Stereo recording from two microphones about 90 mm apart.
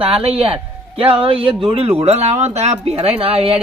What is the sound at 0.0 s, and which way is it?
A man's voice, 90° right.